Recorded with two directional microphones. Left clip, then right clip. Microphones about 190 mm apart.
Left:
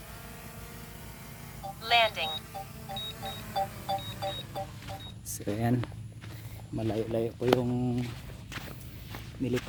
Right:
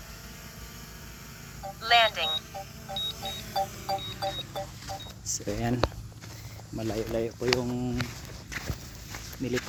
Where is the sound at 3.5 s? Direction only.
15° right (ahead or behind).